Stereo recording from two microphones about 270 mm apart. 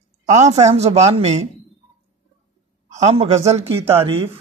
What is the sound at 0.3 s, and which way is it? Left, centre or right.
A woman's voice, right.